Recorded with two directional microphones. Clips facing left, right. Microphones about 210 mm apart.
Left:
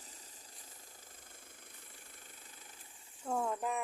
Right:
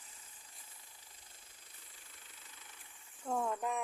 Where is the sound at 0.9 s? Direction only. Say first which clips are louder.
Left 6 dB; 50° left (ahead or behind).